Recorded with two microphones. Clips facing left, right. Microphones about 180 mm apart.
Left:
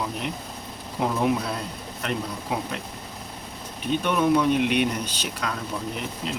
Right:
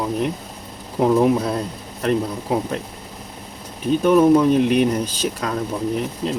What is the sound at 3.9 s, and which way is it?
Speech, 40° right (ahead or behind).